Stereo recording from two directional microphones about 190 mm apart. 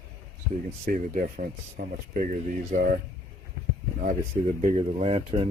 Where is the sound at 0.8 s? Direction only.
40° right (ahead or behind).